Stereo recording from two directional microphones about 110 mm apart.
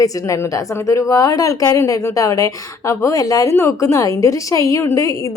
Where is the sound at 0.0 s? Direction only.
30° left (ahead or behind).